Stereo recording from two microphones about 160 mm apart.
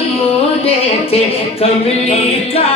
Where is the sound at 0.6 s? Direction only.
40° left (ahead or behind).